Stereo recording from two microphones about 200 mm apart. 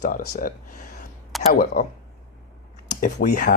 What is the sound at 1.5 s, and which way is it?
Speech, 45° left (ahead or behind).